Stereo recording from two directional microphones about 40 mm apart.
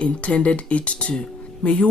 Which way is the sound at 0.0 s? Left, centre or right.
Left.